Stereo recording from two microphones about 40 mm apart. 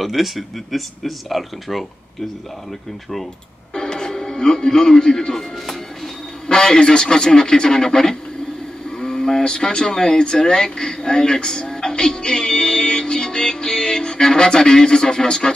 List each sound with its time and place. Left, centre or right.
0.0 s speech: centre
3.7 s music: centre
6.4 s speech: centre